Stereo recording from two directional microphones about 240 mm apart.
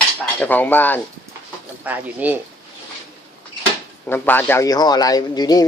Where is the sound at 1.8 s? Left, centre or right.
Centre.